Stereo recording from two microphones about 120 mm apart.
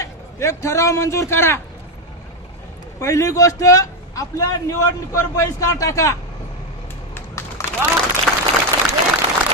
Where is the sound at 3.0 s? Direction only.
25° left (ahead or behind).